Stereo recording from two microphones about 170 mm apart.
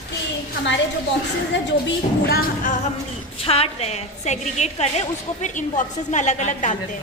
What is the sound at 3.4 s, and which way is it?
A woman's voice, 35° left (ahead or behind).